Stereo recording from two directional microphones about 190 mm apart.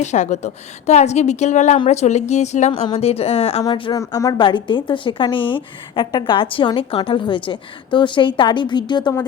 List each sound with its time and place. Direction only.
0.0 s a woman's voice: 40° left (ahead or behind)